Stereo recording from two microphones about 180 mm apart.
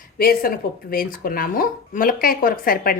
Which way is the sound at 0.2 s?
55° left (ahead or behind).